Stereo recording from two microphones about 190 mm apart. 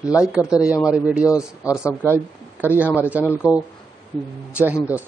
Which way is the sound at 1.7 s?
15° left (ahead or behind).